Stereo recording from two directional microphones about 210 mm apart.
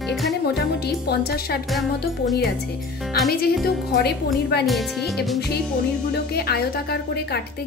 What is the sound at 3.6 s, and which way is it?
Speech, 50° left (ahead or behind).